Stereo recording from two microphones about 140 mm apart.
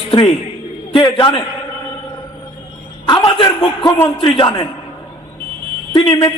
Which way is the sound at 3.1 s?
35° left (ahead or behind).